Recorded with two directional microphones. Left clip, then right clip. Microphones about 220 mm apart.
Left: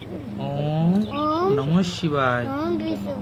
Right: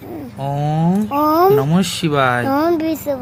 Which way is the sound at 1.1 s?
35° right (ahead or behind).